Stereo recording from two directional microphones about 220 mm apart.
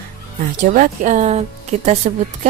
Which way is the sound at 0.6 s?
35° right (ahead or behind).